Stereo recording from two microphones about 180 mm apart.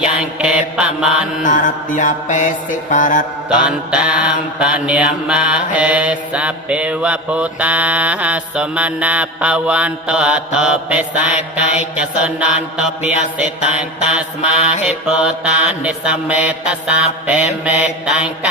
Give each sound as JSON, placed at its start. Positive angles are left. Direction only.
{"t": 0.0, "sound": "mantra", "side_deg": -5}
{"t": 1.4, "sound": "mantra", "side_deg": 45}
{"t": 3.6, "sound": "mantra", "side_deg": -5}